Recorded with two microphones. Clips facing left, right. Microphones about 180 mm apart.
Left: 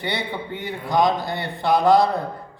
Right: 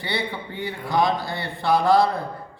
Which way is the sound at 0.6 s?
20° left (ahead or behind).